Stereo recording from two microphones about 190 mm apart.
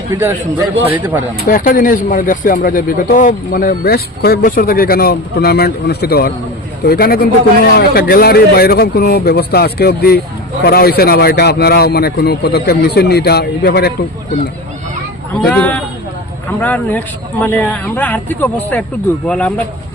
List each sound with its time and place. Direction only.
0.1 s speech: 10° right (ahead or behind)
1.5 s a man's voice: 45° left (ahead or behind)
15.4 s a man's voice: 5° left (ahead or behind)